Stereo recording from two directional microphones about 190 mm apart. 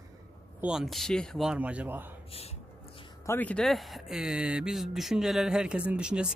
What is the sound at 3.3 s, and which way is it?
Speech, 10° left (ahead or behind).